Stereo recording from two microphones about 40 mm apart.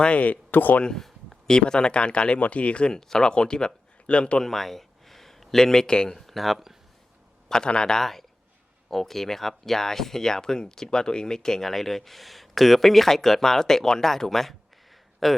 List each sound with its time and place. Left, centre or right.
0.0 s speech: left
0.9 s a sound: centre
1.5 s speech: left
4.4 s speech: centre
6.1 s speech: centre
7.4 s speech: centre
8.9 s a man's voice: centre